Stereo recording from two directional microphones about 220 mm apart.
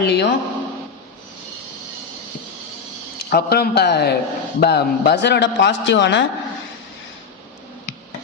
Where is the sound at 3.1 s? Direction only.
45° left (ahead or behind).